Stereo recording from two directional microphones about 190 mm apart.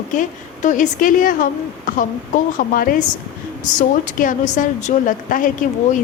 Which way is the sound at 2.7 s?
50° left (ahead or behind).